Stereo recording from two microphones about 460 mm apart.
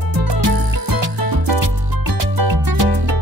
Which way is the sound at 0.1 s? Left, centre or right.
Right.